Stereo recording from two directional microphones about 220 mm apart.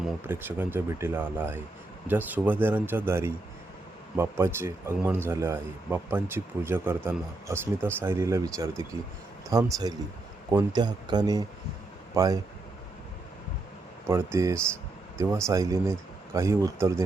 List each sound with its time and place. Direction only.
0.3 s speech: 10° right (ahead or behind)
14.1 s speech: 15° right (ahead or behind)